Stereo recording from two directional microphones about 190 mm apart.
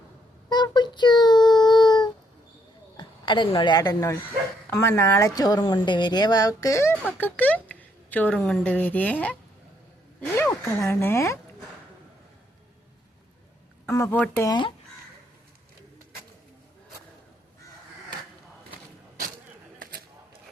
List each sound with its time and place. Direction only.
0.5 s child singing: 25° left (ahead or behind)
3.0 s a woman's voice: 25° left (ahead or behind)
13.8 s speech: 15° left (ahead or behind)
19.8 s a sound: 55° right (ahead or behind)